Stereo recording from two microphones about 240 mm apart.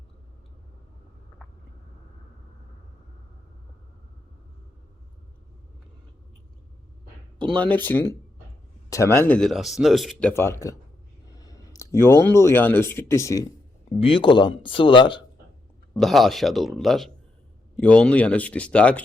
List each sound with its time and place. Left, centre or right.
7.3 s speech: centre
16.0 s speech: centre